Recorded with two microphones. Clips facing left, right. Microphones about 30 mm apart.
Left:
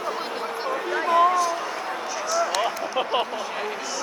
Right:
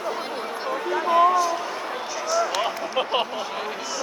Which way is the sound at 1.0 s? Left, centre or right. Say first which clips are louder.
Right 1 dB; centre.